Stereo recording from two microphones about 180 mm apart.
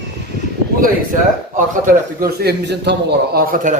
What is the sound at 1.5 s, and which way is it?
A man's voice, 45° right (ahead or behind).